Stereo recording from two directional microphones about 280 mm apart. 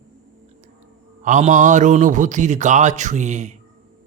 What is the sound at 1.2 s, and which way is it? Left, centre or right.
Speech, right.